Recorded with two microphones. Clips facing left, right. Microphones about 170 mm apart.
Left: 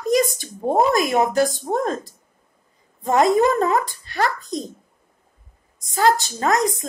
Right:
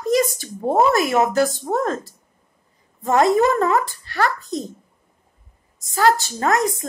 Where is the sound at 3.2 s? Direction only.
20° left (ahead or behind).